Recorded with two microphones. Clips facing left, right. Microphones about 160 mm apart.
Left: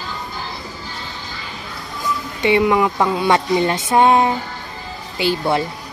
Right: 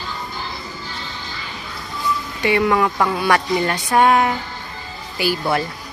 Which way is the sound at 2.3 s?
20° left (ahead or behind).